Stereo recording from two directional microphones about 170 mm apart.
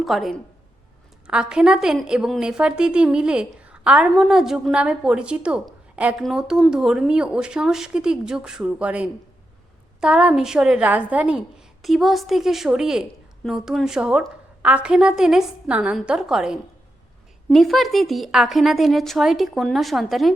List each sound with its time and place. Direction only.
0.0 s a woman's voice: centre (ahead or behind)